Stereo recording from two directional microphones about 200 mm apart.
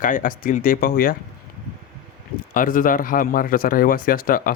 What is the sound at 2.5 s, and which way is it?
Speech, 45° left (ahead or behind).